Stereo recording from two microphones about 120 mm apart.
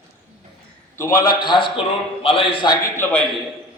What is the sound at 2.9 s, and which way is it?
Speech, 15° left (ahead or behind).